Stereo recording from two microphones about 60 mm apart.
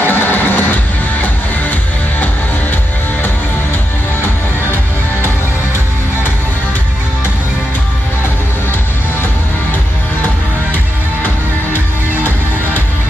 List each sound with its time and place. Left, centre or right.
0.0 s music: left